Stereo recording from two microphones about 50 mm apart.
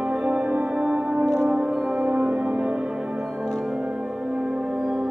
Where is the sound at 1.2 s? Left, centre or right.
Centre.